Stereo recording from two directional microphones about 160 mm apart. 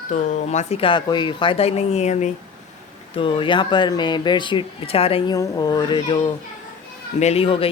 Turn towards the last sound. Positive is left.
turn(degrees=35)  # may be behind; listen again after turning